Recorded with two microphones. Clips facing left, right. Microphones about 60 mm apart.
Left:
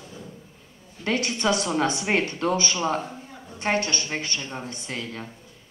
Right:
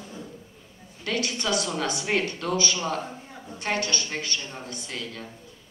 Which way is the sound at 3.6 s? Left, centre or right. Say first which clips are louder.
Left 3 dB; left.